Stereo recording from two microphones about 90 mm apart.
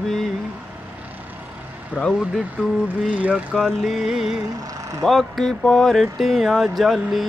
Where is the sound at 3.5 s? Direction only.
Centre (ahead or behind).